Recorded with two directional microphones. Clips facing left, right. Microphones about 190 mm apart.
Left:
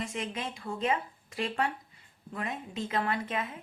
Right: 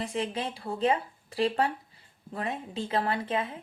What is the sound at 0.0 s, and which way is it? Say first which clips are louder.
A woman's voice: right 4 dB; 30° right (ahead or behind).